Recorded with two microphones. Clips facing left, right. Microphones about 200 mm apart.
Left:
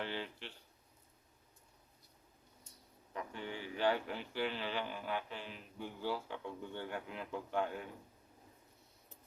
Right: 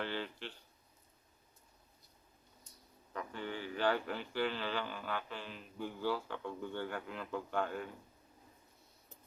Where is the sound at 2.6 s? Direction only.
25° left (ahead or behind).